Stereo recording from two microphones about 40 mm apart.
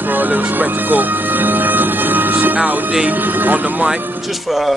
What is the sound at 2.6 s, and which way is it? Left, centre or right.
Speech, right.